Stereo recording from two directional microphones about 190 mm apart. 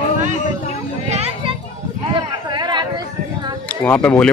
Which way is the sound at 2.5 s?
25° right (ahead or behind).